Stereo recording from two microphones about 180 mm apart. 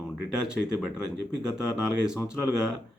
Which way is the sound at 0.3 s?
5° right (ahead or behind).